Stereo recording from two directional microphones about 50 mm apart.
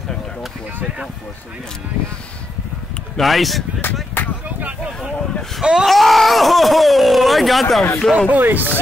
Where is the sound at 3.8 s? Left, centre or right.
Left.